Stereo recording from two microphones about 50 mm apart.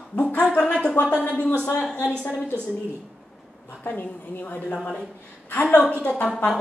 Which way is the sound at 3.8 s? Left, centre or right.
Left.